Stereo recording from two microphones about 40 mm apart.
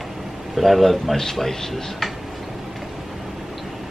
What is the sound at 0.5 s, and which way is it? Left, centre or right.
Speech, centre.